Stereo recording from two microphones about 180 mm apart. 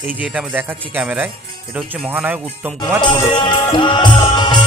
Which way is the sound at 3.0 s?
25° left (ahead or behind).